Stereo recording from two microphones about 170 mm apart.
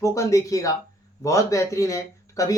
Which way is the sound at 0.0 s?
15° left (ahead or behind).